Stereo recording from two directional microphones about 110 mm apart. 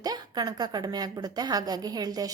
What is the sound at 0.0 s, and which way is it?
A woman's voice, 35° right (ahead or behind).